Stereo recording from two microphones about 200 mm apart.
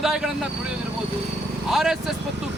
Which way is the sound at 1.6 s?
Centre (ahead or behind).